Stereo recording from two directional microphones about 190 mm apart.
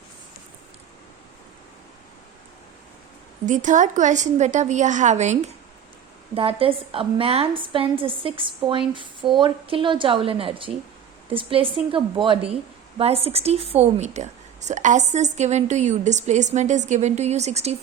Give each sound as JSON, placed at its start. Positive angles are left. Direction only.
{"t": 3.4, "sound": "a woman's voice", "side_deg": -40}